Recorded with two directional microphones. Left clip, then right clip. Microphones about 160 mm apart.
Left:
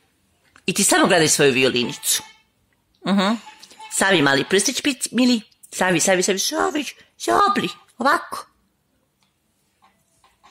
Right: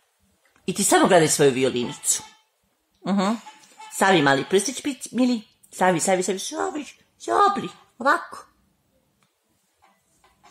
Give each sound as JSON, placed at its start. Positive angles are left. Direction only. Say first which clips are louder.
{"t": 0.5, "sound": "speech", "louder": "left 2 dB", "side_deg": 15}
{"t": 6.5, "sound": "speech", "louder": "left 6 dB", "side_deg": 30}